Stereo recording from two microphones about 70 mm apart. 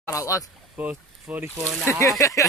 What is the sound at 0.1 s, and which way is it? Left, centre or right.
Speech, left.